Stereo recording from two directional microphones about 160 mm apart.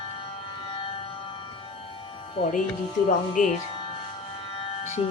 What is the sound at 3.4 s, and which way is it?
Speech, 55° left (ahead or behind).